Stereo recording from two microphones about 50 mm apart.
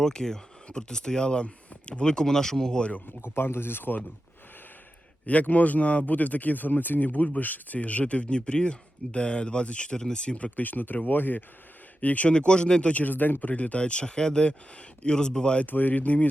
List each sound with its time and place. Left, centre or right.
0.0 s speech: centre
3.2 s speech: left
5.2 s a man's voice: left
11.9 s speech: left
13.5 s speech: left
15.6 s a man's voice: left